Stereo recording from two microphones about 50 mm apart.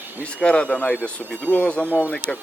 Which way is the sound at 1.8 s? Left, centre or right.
Right.